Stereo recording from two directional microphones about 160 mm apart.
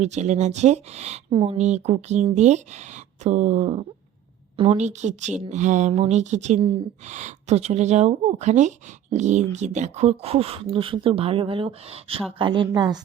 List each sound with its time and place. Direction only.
0.0 s speech: 45° right (ahead or behind)
1.3 s speech: 30° right (ahead or behind)
1.5 s a woman's voice: 45° right (ahead or behind); by 13.0 s 25° right (ahead or behind)